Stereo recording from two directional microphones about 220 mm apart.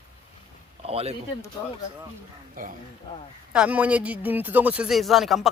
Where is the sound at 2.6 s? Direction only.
40° right (ahead or behind).